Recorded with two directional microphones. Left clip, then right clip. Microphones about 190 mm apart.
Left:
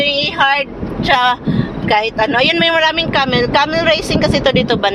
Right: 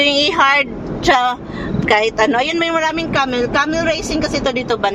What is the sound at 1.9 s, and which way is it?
Speech, 35° right (ahead or behind).